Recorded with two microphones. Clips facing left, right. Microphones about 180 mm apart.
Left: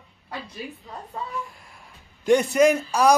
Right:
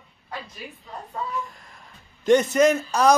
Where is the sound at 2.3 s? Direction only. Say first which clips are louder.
Even; 10° left (ahead or behind).